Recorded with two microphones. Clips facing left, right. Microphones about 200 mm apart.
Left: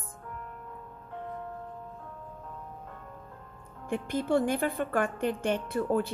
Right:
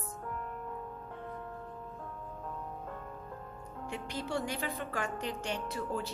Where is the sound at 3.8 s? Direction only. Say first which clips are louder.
Left 10 dB; 55° left (ahead or behind).